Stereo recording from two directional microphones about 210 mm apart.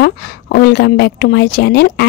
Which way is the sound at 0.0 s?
50° left (ahead or behind).